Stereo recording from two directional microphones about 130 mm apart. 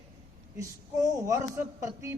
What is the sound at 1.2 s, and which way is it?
Speech, 25° right (ahead or behind).